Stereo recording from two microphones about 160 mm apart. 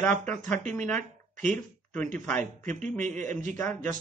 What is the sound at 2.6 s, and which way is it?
Speech, 50° right (ahead or behind).